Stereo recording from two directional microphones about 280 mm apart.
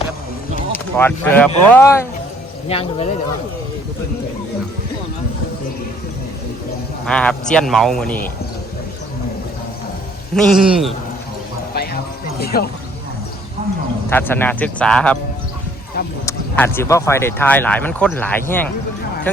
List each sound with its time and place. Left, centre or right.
0.7 s speech: centre
2.6 s speech: left
7.0 s a man's voice: centre
10.3 s a man's voice: centre
11.7 s music: left
12.4 s speech: left
14.1 s a man's voice: centre
16.2 s speech: centre